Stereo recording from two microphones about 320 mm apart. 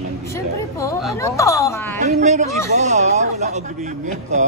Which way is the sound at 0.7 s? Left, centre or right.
Centre.